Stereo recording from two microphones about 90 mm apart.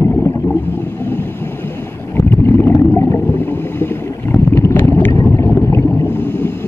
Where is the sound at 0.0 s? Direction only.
30° left (ahead or behind).